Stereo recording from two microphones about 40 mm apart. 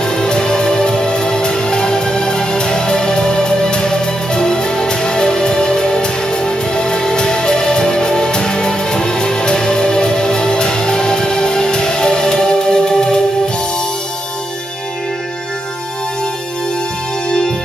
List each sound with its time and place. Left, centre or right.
0.0 s music: centre
17.3 s music: left